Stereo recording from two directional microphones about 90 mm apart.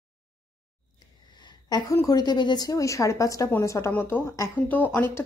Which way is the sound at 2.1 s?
45° left (ahead or behind).